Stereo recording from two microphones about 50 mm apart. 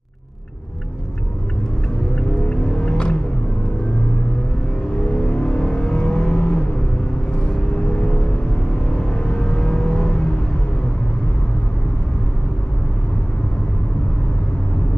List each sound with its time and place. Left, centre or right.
2.1 s music: centre
5.1 s vehicle: centre